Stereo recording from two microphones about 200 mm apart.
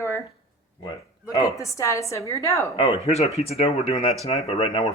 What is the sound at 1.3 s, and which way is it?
A woman's voice, 15° left (ahead or behind).